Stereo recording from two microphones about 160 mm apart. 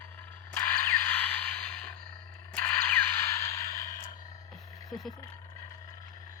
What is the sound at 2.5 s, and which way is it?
Whip, 10° left (ahead or behind).